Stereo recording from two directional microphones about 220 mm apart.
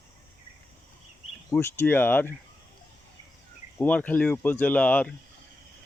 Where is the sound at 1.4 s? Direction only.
10° left (ahead or behind).